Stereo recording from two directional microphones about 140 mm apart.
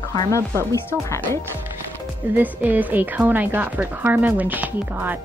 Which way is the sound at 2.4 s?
10° right (ahead or behind).